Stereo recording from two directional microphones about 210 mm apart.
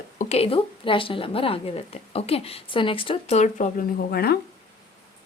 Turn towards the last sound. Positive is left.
turn(degrees=50)  # may be behind; listen again after turning